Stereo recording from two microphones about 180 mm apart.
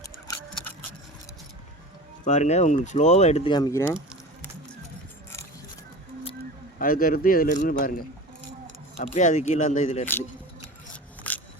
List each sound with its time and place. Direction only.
2.2 s speech: 40° left (ahead or behind)
3.5 s speech: 20° left (ahead or behind)
6.7 s speech: 50° left (ahead or behind)
9.0 s speech: 40° left (ahead or behind)
10.9 s a sound: 10° left (ahead or behind)